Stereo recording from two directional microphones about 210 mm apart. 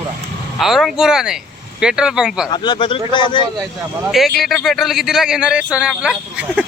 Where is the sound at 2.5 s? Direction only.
20° left (ahead or behind).